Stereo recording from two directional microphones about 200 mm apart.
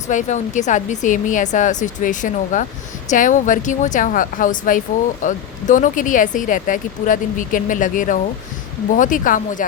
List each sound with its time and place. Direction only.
0.1 s speech: 35° left (ahead or behind)